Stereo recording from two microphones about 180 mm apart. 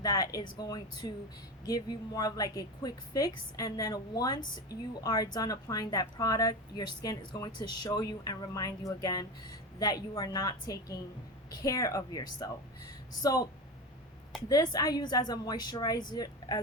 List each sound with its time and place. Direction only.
0.0 s a woman's voice: 20° left (ahead or behind)
14.5 s a woman's voice: 20° left (ahead or behind)